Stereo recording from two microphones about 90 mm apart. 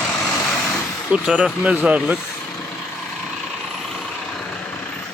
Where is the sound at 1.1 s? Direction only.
10° right (ahead or behind).